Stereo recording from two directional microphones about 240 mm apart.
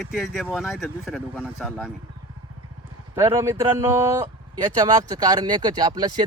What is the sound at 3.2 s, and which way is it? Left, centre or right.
Speech, centre.